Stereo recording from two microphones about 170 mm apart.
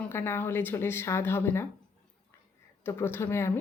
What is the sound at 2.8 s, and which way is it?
Speech, 15° left (ahead or behind).